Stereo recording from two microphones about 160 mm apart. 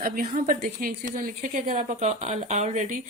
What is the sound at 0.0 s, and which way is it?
A woman's voice, 60° right (ahead or behind).